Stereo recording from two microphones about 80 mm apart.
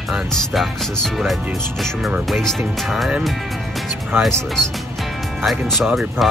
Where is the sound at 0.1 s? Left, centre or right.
Centre.